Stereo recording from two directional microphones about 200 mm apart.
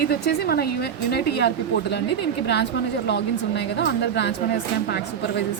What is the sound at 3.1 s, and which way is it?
A woman's voice, 60° left (ahead or behind).